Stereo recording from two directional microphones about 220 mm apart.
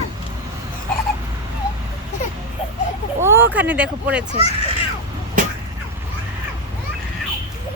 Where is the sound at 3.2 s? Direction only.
10° right (ahead or behind).